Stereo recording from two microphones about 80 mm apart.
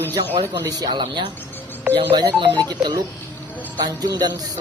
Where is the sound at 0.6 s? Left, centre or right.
Right.